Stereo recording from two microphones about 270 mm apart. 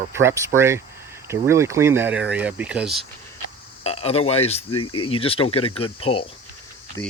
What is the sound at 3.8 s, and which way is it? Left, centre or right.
Speech, left.